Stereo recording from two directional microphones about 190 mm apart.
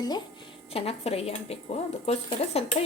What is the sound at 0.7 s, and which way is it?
Speech, 30° left (ahead or behind).